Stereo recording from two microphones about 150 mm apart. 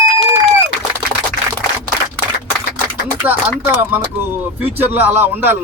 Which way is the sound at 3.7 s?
10° right (ahead or behind).